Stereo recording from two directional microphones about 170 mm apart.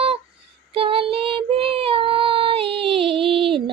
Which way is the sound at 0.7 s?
35° right (ahead or behind).